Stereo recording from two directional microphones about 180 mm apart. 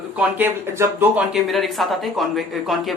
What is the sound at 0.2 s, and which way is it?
Speech, 10° right (ahead or behind).